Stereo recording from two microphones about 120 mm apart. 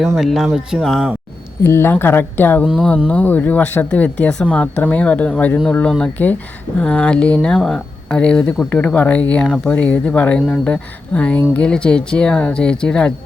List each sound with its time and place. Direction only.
0.2 s speech: centre (ahead or behind)
1.6 s speech: 20° left (ahead or behind)